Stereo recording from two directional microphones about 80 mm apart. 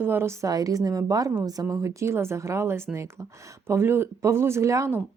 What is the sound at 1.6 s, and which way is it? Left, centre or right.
Speech, right.